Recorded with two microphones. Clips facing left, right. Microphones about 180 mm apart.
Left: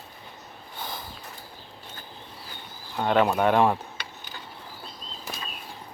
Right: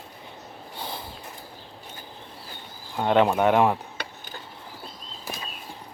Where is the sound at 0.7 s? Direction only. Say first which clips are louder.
Right 1 dB; 30° right (ahead or behind).